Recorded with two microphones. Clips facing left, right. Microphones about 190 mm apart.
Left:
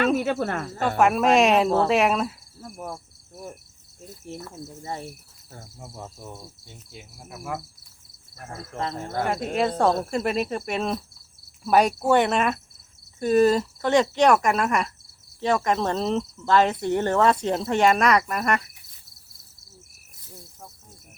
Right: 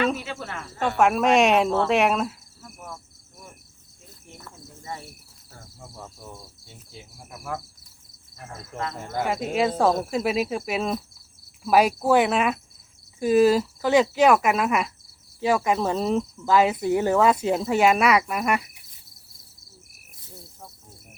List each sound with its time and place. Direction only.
0.2 s speech: 50° left (ahead or behind)
0.8 s cricket: centre (ahead or behind)
2.6 s cricket: 30° left (ahead or behind)
4.8 s cricket: 30° left (ahead or behind)
6.9 s cricket: 10° left (ahead or behind)
9.0 s cricket: centre (ahead or behind)